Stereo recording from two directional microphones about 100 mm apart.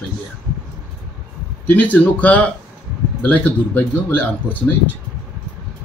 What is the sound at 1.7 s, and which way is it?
Speech, 15° left (ahead or behind).